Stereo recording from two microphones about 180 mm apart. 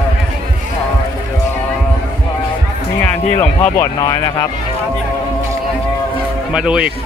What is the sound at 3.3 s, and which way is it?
Speech, 10° left (ahead or behind).